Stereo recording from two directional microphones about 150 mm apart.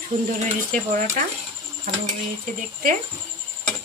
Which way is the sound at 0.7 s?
60° right (ahead or behind).